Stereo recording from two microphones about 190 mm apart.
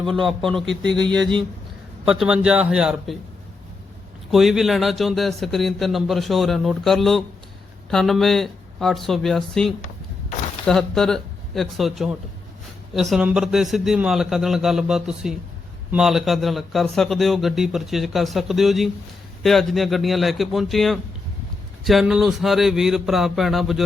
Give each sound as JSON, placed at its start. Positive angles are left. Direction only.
{"t": 0.0, "sound": "a man's voice", "side_deg": -25}
{"t": 2.0, "sound": "a man's voice", "side_deg": -5}
{"t": 4.3, "sound": "a man's voice", "side_deg": 0}